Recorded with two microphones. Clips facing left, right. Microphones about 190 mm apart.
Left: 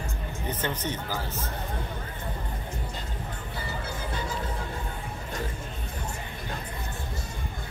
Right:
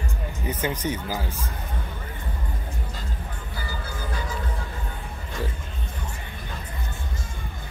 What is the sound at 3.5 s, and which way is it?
Music, 25° left (ahead or behind).